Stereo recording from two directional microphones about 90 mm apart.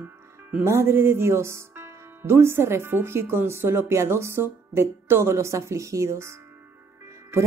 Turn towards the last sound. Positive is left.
turn(degrees=-30)  # may be behind; listen again after turning